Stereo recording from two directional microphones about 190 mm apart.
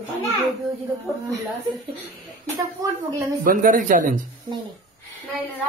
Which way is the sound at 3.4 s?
45° right (ahead or behind).